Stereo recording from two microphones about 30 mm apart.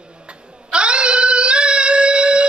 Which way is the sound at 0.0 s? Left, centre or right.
Right.